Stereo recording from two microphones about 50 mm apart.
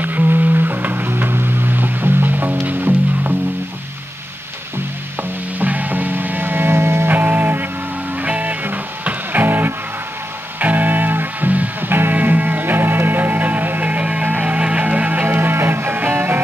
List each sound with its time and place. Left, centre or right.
0.0 s music: right
5.6 s music: right
7.1 s music: right